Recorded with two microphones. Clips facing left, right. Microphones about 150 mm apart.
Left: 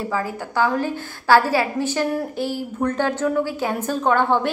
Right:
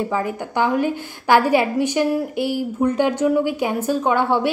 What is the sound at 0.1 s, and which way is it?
A woman's voice, 20° right (ahead or behind).